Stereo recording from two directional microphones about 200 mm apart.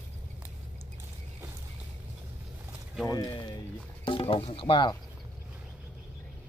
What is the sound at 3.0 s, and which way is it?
Speech, 20° left (ahead or behind).